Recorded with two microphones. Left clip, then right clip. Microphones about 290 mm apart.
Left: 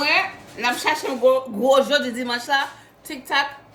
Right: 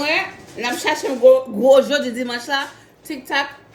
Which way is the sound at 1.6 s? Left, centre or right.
Centre.